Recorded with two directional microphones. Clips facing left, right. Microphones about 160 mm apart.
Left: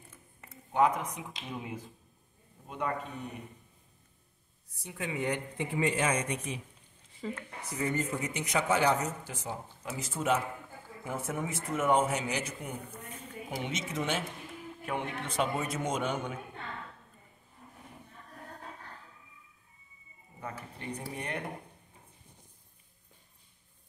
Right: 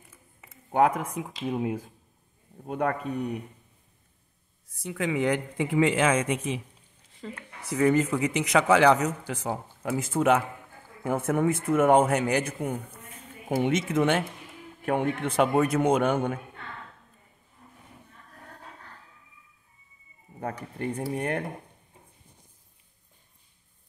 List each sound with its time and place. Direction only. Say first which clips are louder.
0.7 s a man's voice: right 4 dB; 55° right (ahead or behind)
4.6 s speech: right 9 dB; 90° right
7.2 s speech: left 2 dB; 5° left (ahead or behind)
7.7 s a man's voice: right 10 dB; 90° right; by 16.3 s 60° right (ahead or behind)
21.1 s speech: right 8 dB; 50° right (ahead or behind)